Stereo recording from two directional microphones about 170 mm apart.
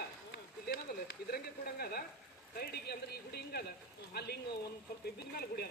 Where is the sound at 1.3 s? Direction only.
65° left (ahead or behind).